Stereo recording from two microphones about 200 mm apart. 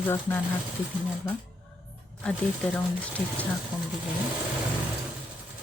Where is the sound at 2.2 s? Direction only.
5° left (ahead or behind).